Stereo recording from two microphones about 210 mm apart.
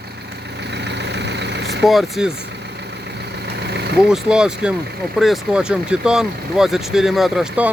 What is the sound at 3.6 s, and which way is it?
Vehicle, 50° right (ahead or behind).